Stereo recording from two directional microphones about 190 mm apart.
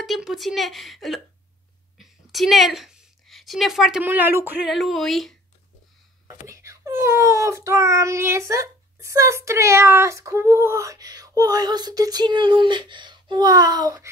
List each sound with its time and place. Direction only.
0.0 s a woman's voice: centre (ahead or behind)
4.6 s a woman's voice: centre (ahead or behind)
6.4 s a child's voice: 15° right (ahead or behind)